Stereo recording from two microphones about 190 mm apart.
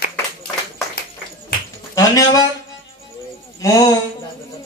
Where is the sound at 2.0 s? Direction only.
15° left (ahead or behind).